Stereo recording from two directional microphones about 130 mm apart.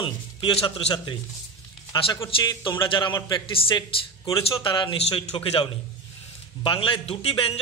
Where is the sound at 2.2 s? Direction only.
35° left (ahead or behind).